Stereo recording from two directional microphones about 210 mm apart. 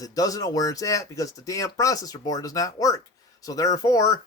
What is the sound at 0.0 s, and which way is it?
Speech, 15° left (ahead or behind).